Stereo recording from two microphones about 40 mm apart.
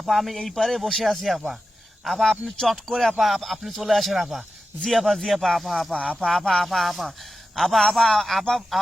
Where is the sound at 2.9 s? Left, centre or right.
Centre.